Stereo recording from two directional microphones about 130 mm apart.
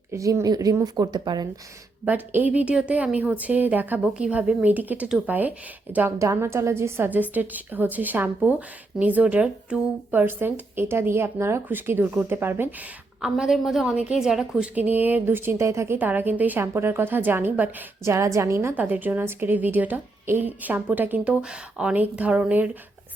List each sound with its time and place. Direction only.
0.1 s speech: 25° right (ahead or behind)
2.0 s a woman's voice: 15° right (ahead or behind)
13.2 s a woman's voice: 5° right (ahead or behind)